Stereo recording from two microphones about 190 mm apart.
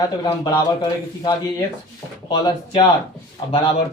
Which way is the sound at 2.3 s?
25° left (ahead or behind).